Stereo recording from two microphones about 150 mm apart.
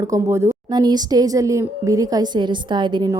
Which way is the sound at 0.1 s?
20° right (ahead or behind).